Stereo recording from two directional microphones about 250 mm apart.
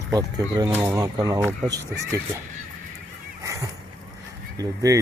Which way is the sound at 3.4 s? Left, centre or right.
Centre.